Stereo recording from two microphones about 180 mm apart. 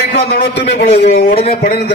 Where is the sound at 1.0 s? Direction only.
35° left (ahead or behind).